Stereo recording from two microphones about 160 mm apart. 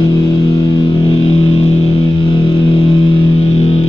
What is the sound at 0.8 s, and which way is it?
Music, 35° left (ahead or behind).